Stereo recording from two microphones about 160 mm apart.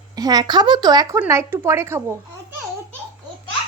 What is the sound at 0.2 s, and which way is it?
A woman's voice, 25° right (ahead or behind).